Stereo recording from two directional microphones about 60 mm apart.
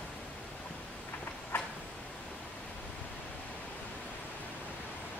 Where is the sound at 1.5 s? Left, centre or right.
Left.